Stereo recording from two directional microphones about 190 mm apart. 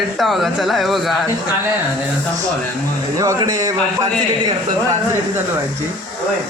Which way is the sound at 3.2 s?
20° right (ahead or behind).